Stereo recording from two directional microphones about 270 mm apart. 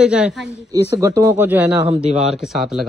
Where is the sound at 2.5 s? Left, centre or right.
Centre.